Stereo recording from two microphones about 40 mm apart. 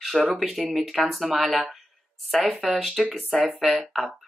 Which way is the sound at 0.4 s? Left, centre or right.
Centre.